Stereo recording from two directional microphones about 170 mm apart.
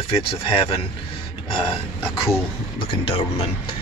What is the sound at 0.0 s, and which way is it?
Speech, 30° left (ahead or behind).